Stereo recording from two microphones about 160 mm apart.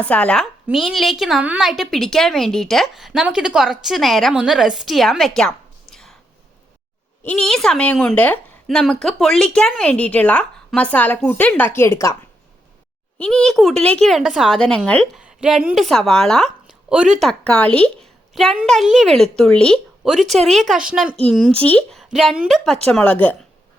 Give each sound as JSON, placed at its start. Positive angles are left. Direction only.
{"t": 0.0, "sound": "a woman's voice", "side_deg": 10}
{"t": 5.9, "sound": "whispering", "side_deg": 5}
{"t": 7.2, "sound": "a woman's voice", "side_deg": 5}
{"t": 13.1, "sound": "a woman's voice", "side_deg": 5}